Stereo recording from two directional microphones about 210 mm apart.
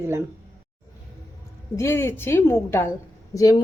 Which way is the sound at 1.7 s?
10° left (ahead or behind).